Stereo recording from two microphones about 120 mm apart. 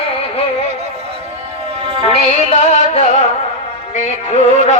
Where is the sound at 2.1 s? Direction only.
65° left (ahead or behind).